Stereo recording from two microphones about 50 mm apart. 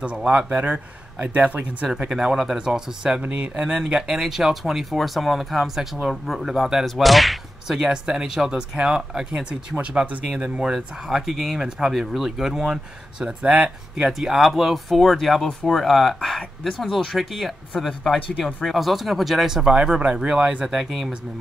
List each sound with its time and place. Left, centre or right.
0.0 s speech: right
0.5 s speech: right
2.0 s speech: centre
3.2 s speech: right
3.6 s speech: centre
13.4 s speech: right
13.9 s speech: centre
20.8 s speech: centre